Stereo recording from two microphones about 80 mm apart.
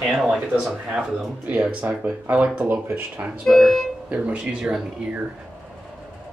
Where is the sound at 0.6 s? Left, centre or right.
Centre.